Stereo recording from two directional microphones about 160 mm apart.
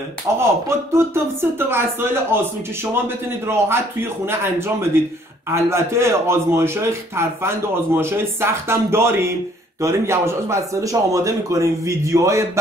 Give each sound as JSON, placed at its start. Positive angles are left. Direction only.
{"t": 0.4, "sound": "a man's voice", "side_deg": -15}
{"t": 3.4, "sound": "a man's voice", "side_deg": -15}